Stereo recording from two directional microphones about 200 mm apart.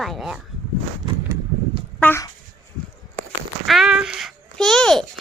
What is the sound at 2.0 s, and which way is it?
Speech, 10° left (ahead or behind).